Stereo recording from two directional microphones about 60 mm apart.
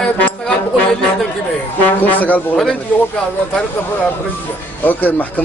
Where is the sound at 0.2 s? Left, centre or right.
Left.